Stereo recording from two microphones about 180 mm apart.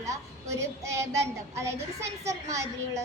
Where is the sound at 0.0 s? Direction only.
15° right (ahead or behind).